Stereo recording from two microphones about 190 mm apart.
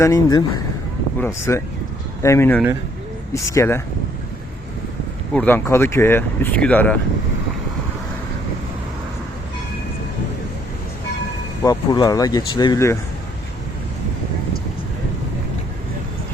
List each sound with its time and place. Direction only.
0.0 s speech: 20° left (ahead or behind)
5.3 s speech: 10° left (ahead or behind)
11.6 s speech: 20° left (ahead or behind)